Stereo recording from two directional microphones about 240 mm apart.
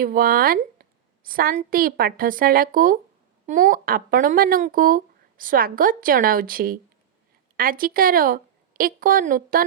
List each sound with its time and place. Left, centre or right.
0.0 s speech: right